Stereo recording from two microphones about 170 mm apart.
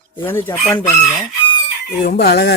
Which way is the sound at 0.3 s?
15° left (ahead or behind).